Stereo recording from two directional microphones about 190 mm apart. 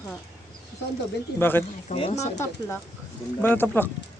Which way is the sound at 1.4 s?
10° left (ahead or behind).